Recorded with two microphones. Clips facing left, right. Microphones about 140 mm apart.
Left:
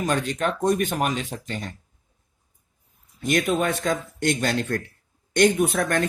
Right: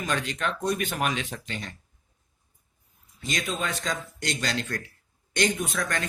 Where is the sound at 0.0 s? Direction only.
40° left (ahead or behind).